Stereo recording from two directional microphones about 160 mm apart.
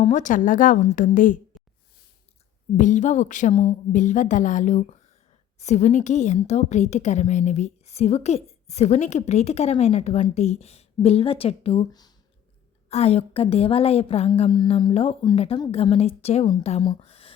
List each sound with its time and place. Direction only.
0.0 s a woman's voice: 50° left (ahead or behind)
2.7 s a woman's voice: 50° left (ahead or behind)
11.9 s speech: 25° left (ahead or behind)
12.9 s a woman's voice: 40° left (ahead or behind)
16.9 s a sound: 35° left (ahead or behind)